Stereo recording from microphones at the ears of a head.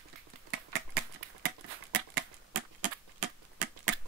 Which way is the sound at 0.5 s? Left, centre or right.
Right.